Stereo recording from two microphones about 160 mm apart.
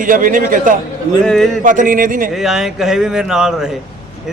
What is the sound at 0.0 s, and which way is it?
Speech, 55° right (ahead or behind).